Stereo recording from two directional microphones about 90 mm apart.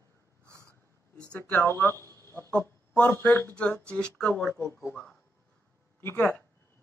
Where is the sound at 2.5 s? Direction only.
15° left (ahead or behind).